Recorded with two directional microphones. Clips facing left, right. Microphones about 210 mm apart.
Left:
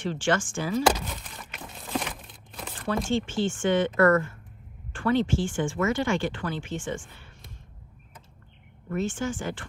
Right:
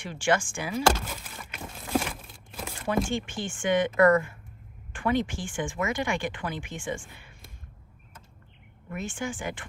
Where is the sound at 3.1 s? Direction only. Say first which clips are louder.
Left 6 dB; 15° right (ahead or behind).